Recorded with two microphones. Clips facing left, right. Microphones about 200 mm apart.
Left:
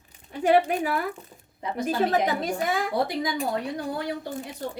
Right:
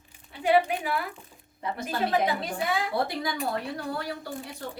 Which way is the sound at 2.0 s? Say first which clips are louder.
Left 2 dB; 45° left (ahead or behind).